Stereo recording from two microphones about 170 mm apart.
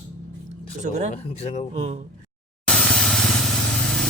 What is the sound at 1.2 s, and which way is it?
Speech, 40° left (ahead or behind).